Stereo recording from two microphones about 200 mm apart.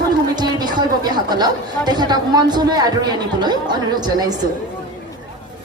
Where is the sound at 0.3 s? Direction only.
20° right (ahead or behind).